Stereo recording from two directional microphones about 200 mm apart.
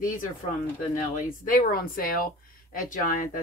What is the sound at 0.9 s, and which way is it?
Speech, 40° left (ahead or behind).